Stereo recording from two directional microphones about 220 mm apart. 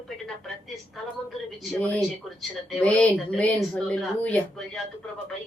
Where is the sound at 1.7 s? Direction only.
5° left (ahead or behind).